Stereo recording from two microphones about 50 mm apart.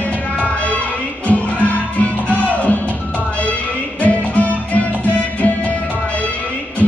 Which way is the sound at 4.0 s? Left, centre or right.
Left.